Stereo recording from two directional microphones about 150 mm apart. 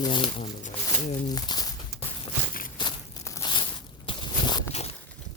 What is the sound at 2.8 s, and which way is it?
Walk, 30° left (ahead or behind).